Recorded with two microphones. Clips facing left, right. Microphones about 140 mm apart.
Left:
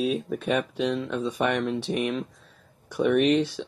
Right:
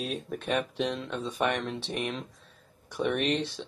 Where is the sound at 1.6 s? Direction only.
45° left (ahead or behind).